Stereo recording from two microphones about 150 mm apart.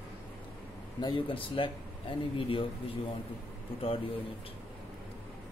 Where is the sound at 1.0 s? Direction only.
30° left (ahead or behind).